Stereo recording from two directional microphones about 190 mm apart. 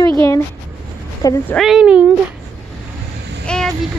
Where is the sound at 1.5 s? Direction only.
Centre (ahead or behind).